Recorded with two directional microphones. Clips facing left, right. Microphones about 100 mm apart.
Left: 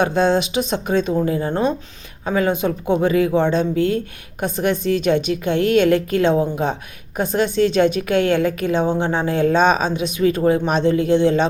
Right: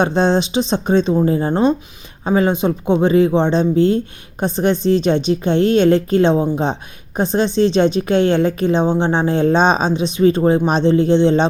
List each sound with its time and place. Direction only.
0.0 s speech: 25° right (ahead or behind)